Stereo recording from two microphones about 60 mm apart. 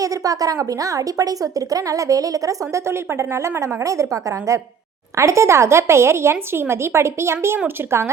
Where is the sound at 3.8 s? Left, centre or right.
Right.